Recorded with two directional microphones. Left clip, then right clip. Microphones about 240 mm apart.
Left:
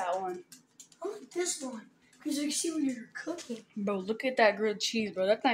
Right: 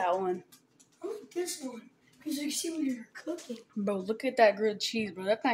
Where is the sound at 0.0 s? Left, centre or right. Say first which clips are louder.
Right 3 dB; right.